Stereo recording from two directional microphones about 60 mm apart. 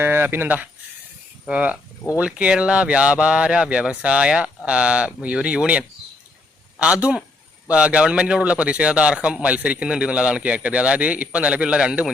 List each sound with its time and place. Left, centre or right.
0.0 s a man's voice: right; by 12.1 s centre